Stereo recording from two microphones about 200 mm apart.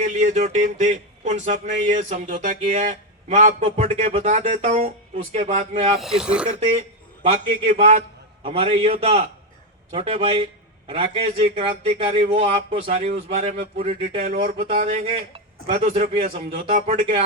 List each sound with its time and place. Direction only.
0.0 s speech: 40° right (ahead or behind)
6.0 s speech: 5° right (ahead or behind)
7.2 s speech: 40° right (ahead or behind)
8.4 s a man's voice: 30° right (ahead or behind)
14.2 s speech: 50° right (ahead or behind)
15.0 s a man's voice: 25° right (ahead or behind)
15.7 s speech: 45° right (ahead or behind)